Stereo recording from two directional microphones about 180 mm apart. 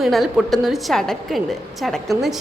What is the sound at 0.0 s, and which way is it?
A woman's voice, centre (ahead or behind).